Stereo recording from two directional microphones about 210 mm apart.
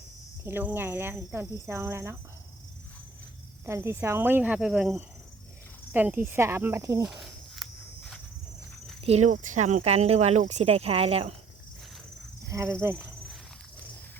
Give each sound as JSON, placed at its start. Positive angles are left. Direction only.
{"t": 0.4, "sound": "speech", "side_deg": -10}
{"t": 3.7, "sound": "speech", "side_deg": -10}
{"t": 5.9, "sound": "snake", "side_deg": -10}
{"t": 9.0, "sound": "speech", "side_deg": -30}
{"t": 12.5, "sound": "speech", "side_deg": -15}